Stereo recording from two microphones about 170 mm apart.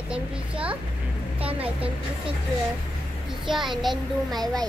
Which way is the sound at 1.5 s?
35° right (ahead or behind).